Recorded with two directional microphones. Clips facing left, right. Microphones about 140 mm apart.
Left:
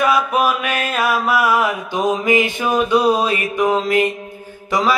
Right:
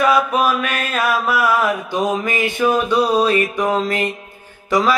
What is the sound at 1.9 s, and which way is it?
Mantra, 15° left (ahead or behind).